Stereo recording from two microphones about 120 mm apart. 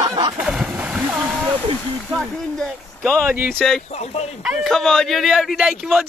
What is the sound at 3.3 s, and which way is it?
Speech, 15° right (ahead or behind).